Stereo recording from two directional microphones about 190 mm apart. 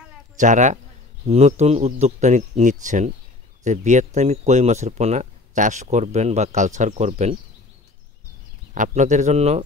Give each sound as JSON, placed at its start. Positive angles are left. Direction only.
{"t": 0.4, "sound": "speech", "side_deg": -40}
{"t": 8.7, "sound": "speech", "side_deg": -40}